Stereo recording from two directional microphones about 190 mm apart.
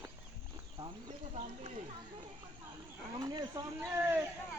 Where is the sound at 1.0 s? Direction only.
35° right (ahead or behind).